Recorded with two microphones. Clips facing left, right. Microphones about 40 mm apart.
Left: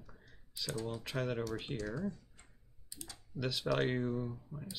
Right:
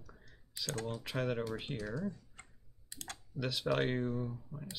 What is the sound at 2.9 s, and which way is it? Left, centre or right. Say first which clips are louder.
Typing: right 4 dB; right.